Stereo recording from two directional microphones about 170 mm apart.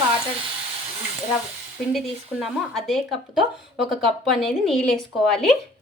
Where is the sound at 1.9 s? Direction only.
Centre (ahead or behind).